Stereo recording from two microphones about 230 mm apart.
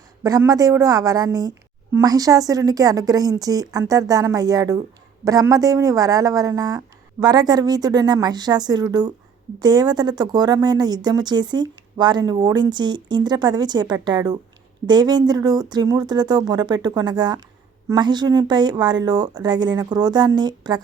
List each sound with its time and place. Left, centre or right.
0.2 s speech: centre